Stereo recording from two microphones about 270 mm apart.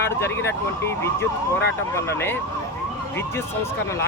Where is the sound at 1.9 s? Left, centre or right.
Centre.